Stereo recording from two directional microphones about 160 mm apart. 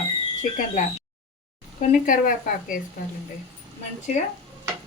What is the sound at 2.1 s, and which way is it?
Speech, 55° left (ahead or behind).